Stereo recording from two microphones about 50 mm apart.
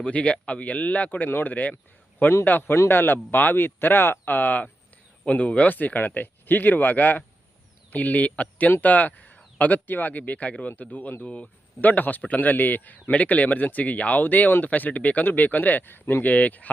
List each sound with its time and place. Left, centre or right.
0.0 s speech: left
1.3 s a man's voice: left
5.6 s a man's voice: left
11.2 s speech: left
11.8 s a man's voice: left